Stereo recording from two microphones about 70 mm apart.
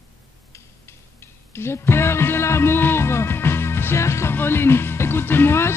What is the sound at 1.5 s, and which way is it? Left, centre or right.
Music, left.